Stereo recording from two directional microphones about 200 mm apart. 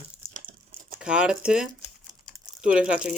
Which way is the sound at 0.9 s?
5° right (ahead or behind).